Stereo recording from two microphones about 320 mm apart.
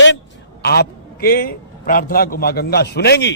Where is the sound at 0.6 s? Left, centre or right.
Left.